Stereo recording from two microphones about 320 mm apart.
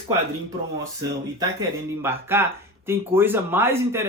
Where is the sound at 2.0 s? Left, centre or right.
Centre.